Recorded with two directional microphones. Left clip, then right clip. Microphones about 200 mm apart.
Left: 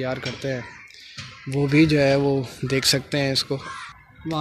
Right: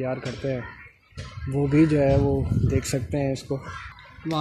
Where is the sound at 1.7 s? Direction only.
Centre (ahead or behind).